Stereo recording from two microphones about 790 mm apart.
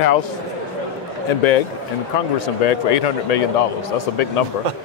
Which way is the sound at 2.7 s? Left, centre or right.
Left.